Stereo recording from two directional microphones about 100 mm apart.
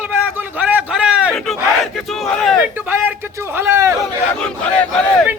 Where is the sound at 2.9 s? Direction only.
20° right (ahead or behind).